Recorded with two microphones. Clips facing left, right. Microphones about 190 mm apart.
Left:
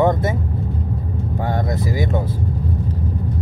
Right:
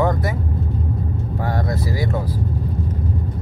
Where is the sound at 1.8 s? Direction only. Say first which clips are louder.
Left 2 dB; 20° left (ahead or behind).